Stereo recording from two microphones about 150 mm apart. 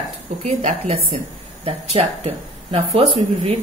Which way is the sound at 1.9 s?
35° right (ahead or behind).